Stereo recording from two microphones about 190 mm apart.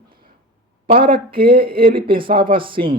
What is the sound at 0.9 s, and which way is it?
Speech, 25° right (ahead or behind).